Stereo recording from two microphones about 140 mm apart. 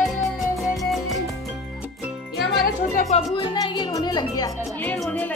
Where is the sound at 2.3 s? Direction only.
Centre (ahead or behind).